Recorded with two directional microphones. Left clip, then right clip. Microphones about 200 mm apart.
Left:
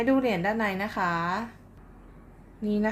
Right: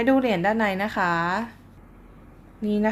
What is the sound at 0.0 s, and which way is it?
A woman's voice, 15° right (ahead or behind).